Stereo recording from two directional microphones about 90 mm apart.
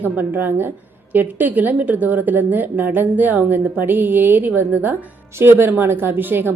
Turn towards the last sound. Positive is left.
turn(degrees=-25)  # may be behind; listen again after turning